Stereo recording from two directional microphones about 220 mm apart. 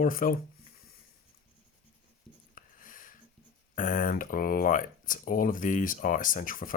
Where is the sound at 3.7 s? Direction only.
35° left (ahead or behind).